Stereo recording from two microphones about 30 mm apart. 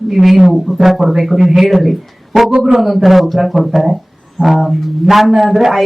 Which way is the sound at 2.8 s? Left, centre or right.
Centre.